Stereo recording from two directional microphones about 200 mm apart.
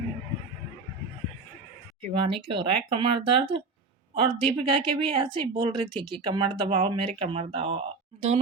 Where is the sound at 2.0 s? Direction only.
25° right (ahead or behind).